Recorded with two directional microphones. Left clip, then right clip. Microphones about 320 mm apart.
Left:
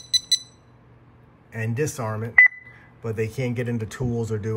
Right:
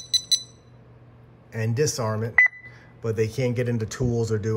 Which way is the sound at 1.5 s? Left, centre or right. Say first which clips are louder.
Right 2 dB; centre.